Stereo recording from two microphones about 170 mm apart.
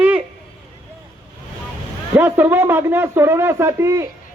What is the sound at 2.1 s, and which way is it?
Speech, 10° right (ahead or behind).